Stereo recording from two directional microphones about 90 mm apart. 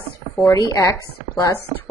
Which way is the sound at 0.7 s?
35° left (ahead or behind).